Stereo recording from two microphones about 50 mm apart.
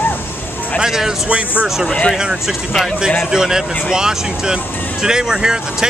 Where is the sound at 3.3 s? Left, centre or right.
Centre.